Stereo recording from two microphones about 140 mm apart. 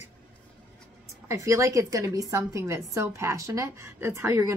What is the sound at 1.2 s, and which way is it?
Speech, 20° right (ahead or behind).